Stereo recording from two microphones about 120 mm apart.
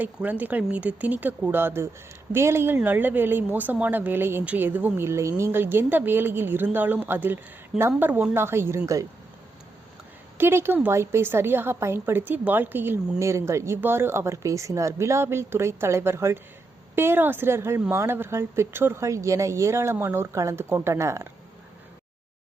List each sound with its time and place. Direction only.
0.0 s a woman's voice: 15° right (ahead or behind)
10.3 s a woman's voice: 20° right (ahead or behind)